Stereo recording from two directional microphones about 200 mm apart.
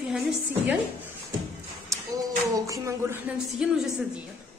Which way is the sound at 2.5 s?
15° right (ahead or behind).